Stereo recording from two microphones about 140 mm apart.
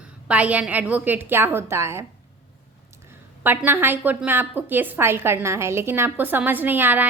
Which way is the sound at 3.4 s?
15° right (ahead or behind).